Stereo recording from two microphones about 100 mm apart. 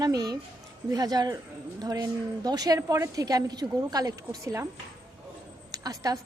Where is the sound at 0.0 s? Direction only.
40° right (ahead or behind).